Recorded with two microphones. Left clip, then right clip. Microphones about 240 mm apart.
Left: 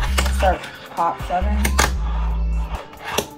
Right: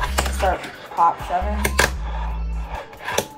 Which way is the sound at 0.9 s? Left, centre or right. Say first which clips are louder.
Right 2 dB; centre.